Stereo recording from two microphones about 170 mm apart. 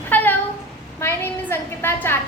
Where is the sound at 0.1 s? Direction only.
10° left (ahead or behind).